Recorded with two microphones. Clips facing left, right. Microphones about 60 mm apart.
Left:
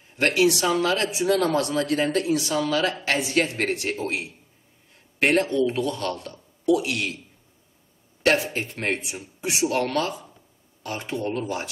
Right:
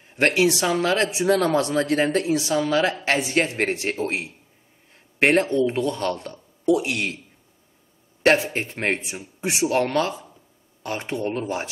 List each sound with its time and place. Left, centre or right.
0.1 s speech: right
8.2 s speech: right
9.1 s speech: right
9.5 s speech: right